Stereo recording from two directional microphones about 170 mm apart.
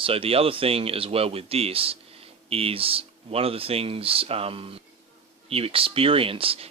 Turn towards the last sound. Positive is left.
turn(degrees=-35)  # may be behind; listen again after turning